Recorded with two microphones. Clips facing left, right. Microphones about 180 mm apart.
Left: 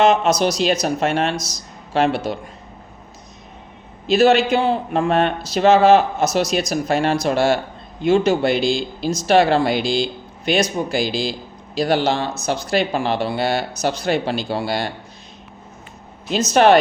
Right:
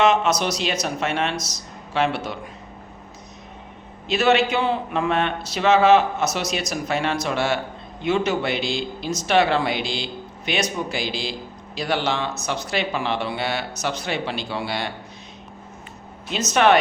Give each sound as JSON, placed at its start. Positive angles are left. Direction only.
{"t": 0.0, "sound": "speech", "side_deg": 35}
{"t": 4.0, "sound": "speech", "side_deg": 40}
{"t": 16.5, "sound": "speech", "side_deg": 35}